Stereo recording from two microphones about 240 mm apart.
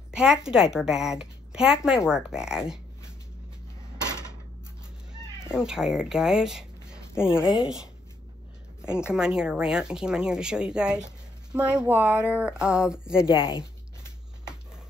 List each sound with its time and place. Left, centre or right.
0.1 s a woman's voice: centre
5.6 s a woman's voice: centre